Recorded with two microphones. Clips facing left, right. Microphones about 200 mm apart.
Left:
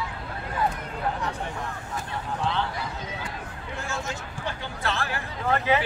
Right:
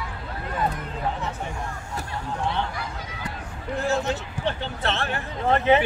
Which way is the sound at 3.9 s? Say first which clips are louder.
Right 9 dB; 35° right (ahead or behind).